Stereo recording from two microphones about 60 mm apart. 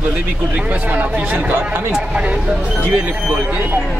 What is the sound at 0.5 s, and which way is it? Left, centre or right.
Speech, right.